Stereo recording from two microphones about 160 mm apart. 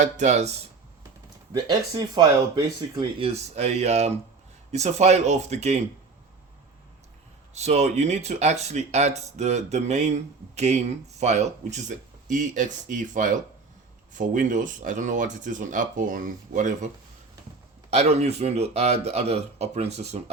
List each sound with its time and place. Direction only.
0.0 s speech: 45° right (ahead or behind)
1.5 s speech: 25° right (ahead or behind); by 5.8 s 45° right (ahead or behind)
7.5 s speech: 45° right (ahead or behind)
11.2 s speech: 45° right (ahead or behind)
17.9 s speech: 40° right (ahead or behind)